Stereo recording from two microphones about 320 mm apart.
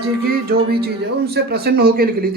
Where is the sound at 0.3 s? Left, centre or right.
Right.